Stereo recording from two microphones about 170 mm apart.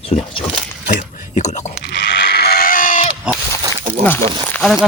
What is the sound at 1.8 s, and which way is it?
Sheep, 90° left.